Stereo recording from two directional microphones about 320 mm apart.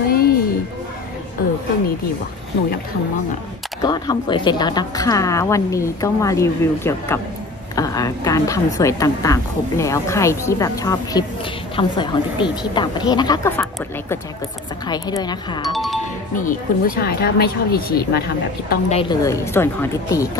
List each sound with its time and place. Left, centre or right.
0.1 s music: left
3.8 s a woman's voice: centre
15.7 s speech: centre
16.3 s speech: left
18.7 s a woman's voice: centre